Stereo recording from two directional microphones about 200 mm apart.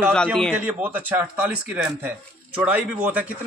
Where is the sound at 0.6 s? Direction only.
10° right (ahead or behind).